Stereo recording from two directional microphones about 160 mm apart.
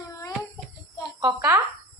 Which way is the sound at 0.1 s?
20° left (ahead or behind).